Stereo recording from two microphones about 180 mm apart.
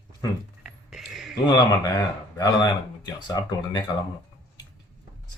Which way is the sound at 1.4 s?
20° left (ahead or behind).